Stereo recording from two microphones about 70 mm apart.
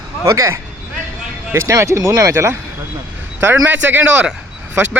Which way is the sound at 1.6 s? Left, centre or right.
Right.